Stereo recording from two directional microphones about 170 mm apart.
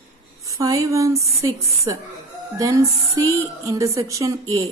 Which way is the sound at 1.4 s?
20° right (ahead or behind).